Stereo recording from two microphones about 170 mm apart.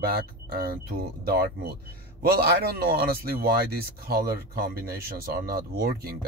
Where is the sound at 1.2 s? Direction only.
65° right (ahead or behind).